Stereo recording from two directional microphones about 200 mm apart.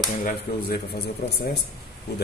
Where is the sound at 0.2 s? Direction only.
45° left (ahead or behind).